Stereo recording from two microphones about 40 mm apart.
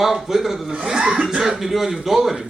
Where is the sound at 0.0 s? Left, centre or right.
Centre.